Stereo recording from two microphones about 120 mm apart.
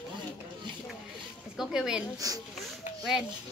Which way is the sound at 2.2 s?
30° right (ahead or behind).